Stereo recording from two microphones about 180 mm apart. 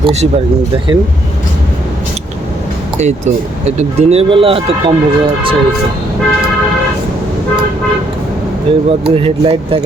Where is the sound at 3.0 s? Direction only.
40° right (ahead or behind).